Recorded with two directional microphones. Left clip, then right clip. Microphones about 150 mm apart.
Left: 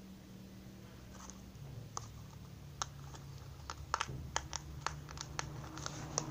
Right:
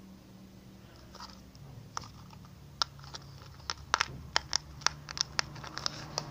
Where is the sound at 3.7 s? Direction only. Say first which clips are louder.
Right 8 dB; 45° right (ahead or behind).